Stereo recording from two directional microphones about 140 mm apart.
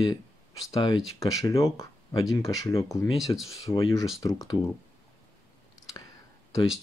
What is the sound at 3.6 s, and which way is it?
Speech, 25° left (ahead or behind).